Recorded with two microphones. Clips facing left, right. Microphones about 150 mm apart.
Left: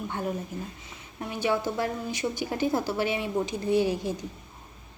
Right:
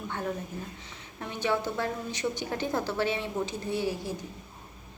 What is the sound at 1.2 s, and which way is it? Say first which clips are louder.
A woman's voice: left 2 dB; 10° left (ahead or behind).